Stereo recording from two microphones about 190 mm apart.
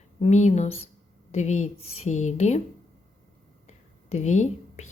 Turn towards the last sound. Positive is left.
turn(degrees=40)  # may be behind; listen again after turning